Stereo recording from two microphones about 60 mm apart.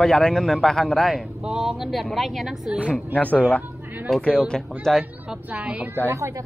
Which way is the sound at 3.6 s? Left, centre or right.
Right.